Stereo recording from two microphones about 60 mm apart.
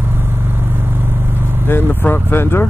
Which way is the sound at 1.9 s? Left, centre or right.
Left.